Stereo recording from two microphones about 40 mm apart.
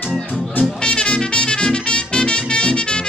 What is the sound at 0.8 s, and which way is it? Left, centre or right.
Music, left.